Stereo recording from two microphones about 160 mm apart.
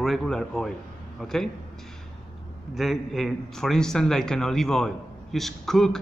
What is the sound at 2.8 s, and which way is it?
A man's voice, centre (ahead or behind).